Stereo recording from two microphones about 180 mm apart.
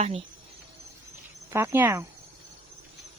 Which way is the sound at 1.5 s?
10° right (ahead or behind).